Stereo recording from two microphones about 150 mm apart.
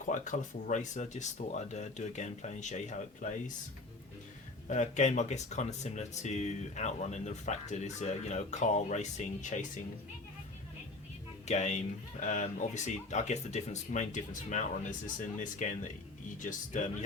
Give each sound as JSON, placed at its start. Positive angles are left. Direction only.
{"t": 0.0, "sound": "speech", "side_deg": 55}
{"t": 4.7, "sound": "speech", "side_deg": 50}
{"t": 11.4, "sound": "speech", "side_deg": 50}